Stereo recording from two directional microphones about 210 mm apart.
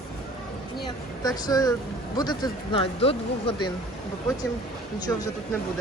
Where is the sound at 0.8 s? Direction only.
20° left (ahead or behind).